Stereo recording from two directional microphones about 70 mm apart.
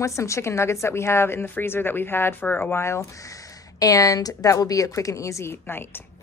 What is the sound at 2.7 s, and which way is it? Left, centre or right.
A woman's voice, left.